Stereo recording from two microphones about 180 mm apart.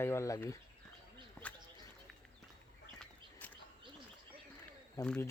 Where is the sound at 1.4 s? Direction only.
10° left (ahead or behind).